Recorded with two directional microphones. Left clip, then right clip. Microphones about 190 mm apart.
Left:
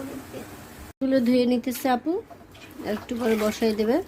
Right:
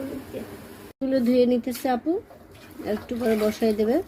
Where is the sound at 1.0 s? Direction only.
25° left (ahead or behind).